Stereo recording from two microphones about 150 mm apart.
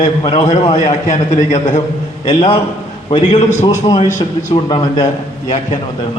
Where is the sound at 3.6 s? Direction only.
30° left (ahead or behind).